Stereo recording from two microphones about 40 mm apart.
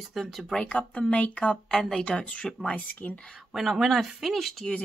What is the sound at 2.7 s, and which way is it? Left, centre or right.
Speech, left.